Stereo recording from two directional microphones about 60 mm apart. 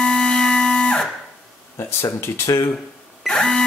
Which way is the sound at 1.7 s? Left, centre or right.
Left.